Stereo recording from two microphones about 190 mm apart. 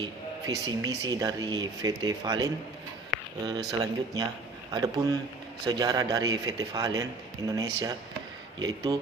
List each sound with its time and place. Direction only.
0.0 s a man's voice: 20° right (ahead or behind)
3.7 s a man's voice: 20° right (ahead or behind)